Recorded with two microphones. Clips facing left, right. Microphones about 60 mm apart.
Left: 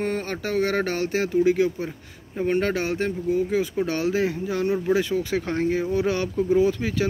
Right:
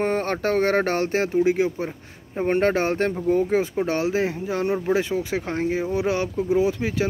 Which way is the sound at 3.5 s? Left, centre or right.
Right.